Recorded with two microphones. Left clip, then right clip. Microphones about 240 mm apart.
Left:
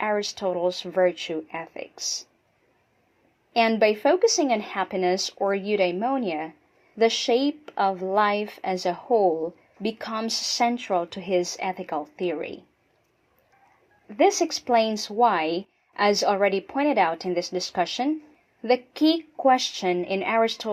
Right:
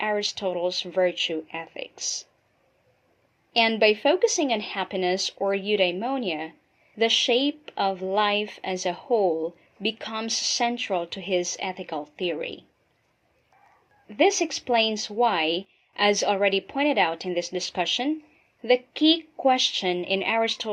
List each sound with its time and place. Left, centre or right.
0.0 s speech: left
1.5 s speech: centre
1.7 s a sound: left
3.6 s speech: left
14.1 s speech: left